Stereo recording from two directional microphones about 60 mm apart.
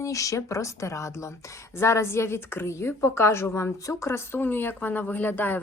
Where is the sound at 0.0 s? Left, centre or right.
Left.